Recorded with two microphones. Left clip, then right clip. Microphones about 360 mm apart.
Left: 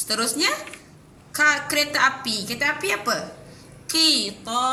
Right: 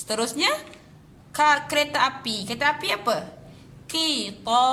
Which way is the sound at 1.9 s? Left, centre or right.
Centre.